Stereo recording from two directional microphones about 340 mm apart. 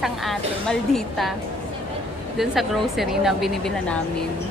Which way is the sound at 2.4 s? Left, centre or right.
Centre.